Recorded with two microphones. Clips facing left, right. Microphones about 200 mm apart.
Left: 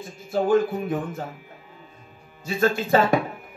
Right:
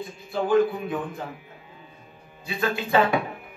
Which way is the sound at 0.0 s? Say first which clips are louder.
Left 4 dB; 45° left (ahead or behind).